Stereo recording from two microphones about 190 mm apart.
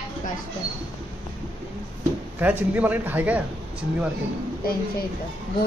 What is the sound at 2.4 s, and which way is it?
Speech, 10° right (ahead or behind).